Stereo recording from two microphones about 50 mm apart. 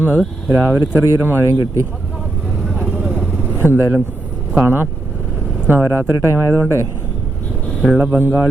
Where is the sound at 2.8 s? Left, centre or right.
Right.